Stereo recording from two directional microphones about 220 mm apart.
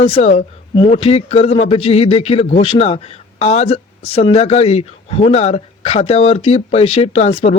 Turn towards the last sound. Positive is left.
turn(degrees=30)  # may be behind; listen again after turning